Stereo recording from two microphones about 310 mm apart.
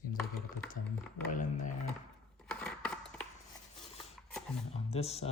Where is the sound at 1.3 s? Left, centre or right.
Left.